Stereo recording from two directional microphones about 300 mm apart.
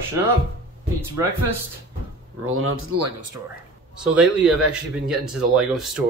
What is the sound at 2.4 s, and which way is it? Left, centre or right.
Speech, right.